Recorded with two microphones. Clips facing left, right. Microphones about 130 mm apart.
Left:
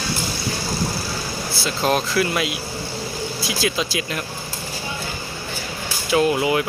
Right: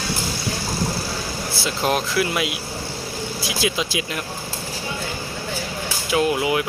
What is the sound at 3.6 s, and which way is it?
Speech, 15° right (ahead or behind).